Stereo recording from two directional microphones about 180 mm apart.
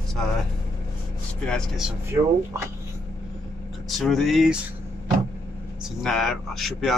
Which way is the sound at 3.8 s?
Centre (ahead or behind).